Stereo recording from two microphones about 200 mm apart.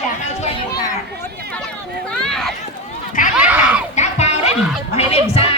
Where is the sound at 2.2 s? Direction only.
Centre (ahead or behind).